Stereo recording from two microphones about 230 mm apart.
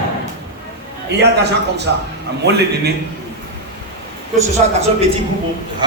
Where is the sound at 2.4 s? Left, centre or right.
Right.